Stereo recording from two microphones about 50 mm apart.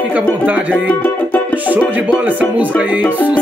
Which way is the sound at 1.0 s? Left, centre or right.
Left.